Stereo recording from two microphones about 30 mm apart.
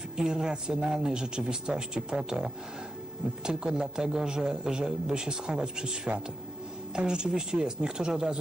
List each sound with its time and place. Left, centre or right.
0.2 s a man's voice: right
6.9 s a man's voice: right